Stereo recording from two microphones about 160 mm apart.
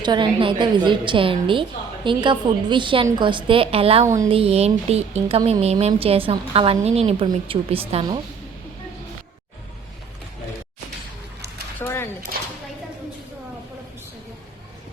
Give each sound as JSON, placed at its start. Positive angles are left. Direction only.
{"t": 0.0, "sound": "a woman's voice", "side_deg": -30}
{"t": 4.0, "sound": "speech", "side_deg": -20}
{"t": 4.3, "sound": "a woman's voice", "side_deg": -35}
{"t": 11.8, "sound": "a sound", "side_deg": 15}